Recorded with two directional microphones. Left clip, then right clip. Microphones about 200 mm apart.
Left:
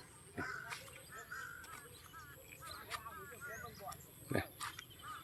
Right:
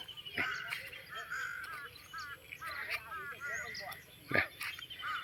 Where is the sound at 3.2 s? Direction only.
40° left (ahead or behind).